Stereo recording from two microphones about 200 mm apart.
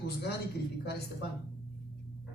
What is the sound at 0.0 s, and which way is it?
Speech, 55° left (ahead or behind).